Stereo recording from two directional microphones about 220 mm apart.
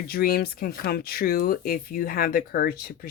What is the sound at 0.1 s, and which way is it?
Speech, 45° left (ahead or behind).